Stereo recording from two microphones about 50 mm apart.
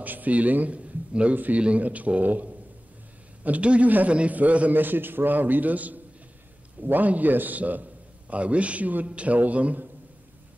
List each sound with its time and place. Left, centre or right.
0.0 s a man's voice: right